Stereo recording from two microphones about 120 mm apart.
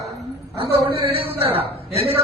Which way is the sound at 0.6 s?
50° right (ahead or behind).